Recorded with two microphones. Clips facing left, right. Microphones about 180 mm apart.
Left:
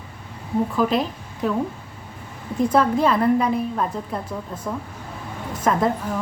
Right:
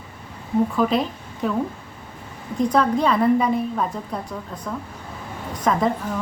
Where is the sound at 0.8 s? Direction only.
Centre (ahead or behind).